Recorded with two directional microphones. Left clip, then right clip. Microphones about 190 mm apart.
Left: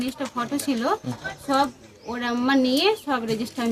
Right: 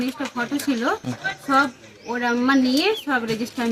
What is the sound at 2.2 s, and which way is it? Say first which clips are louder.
Speech: right 2 dB; 30° left (ahead or behind).